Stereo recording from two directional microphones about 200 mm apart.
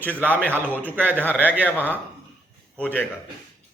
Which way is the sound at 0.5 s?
10° right (ahead or behind).